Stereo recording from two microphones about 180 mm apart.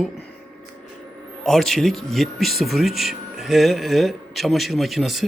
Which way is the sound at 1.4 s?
Centre (ahead or behind).